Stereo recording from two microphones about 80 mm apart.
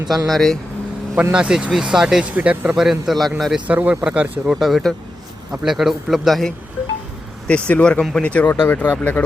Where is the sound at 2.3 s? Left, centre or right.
Centre.